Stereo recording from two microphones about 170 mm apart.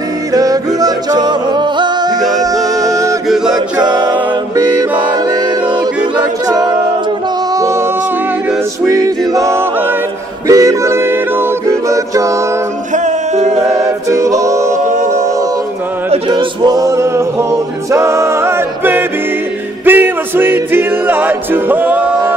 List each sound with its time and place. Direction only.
0.3 s music: 20° right (ahead or behind)
2.2 s music: centre (ahead or behind)
2.8 s male singing: 20° right (ahead or behind)
3.3 s chant: 5° right (ahead or behind)
3.8 s a capella: 25° right (ahead or behind)
8.8 s music: 20° right (ahead or behind)
12.9 s music: 45° right (ahead or behind)
13.6 s a capella: 20° right (ahead or behind)
16.1 s male singing: 30° right (ahead or behind)
19.8 s music: 10° right (ahead or behind)